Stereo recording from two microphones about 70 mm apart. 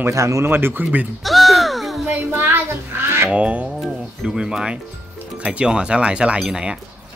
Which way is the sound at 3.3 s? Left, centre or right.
Centre.